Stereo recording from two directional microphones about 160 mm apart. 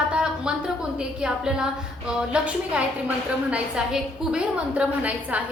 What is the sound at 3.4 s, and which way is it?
A woman's voice, 5° right (ahead or behind).